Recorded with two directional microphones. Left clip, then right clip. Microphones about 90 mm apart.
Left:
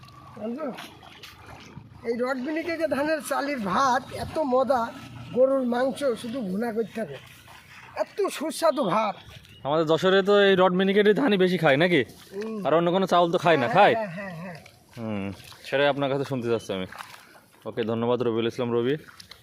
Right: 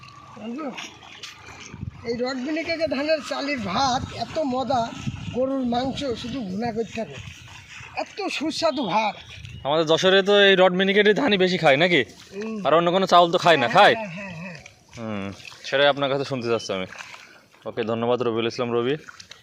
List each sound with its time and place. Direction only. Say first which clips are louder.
0.4 s speech: left 2 dB; 20° left (ahead or behind)
2.1 s speech: right 1 dB; 10° left (ahead or behind)
2.8 s speech: right 2 dB; 35° left (ahead or behind)
6.9 s speech: right 2 dB; 20° left (ahead or behind)
7.9 s speech: left 1 dB; 35° left (ahead or behind)
8.6 s speech: even; 50° left (ahead or behind)
9.6 s speech: right 3 dB; 30° left (ahead or behind)
12.6 s speech: right 3 dB; 25° left (ahead or behind)
14.0 s a sound: even; 20° right (ahead or behind)
15.0 s a sound: right 1 dB; 30° left (ahead or behind)
15.6 s speech: right 4 dB; 35° left (ahead or behind)